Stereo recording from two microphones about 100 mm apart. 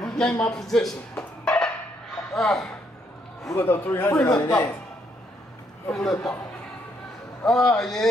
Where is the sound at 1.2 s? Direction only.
10° left (ahead or behind).